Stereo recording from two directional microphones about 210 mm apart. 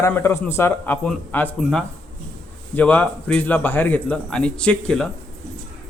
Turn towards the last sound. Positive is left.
turn(degrees=5)  # may be behind; listen again after turning